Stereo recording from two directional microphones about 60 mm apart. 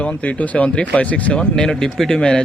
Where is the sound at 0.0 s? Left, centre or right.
Left.